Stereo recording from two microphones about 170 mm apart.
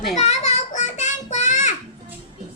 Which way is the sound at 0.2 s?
40° left (ahead or behind).